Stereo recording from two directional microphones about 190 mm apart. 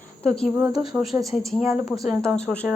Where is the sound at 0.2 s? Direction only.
5° left (ahead or behind).